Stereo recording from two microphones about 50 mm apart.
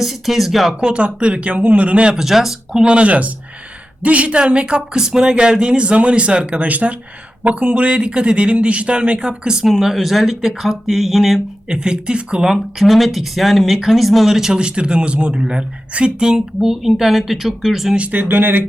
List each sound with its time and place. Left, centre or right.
0.0 s speech: centre
0.8 s speech: centre
2.0 s speech: centre
2.8 s speech: right
9.6 s speech: centre
11.7 s speech: centre
12.8 s speech: centre
14.6 s speech: centre
17.9 s speech: right
18.2 s speech: right